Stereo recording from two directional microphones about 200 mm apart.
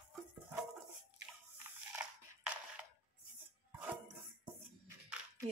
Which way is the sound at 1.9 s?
10° right (ahead or behind).